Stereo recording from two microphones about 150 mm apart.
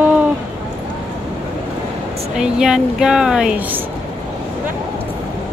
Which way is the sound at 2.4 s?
5° right (ahead or behind).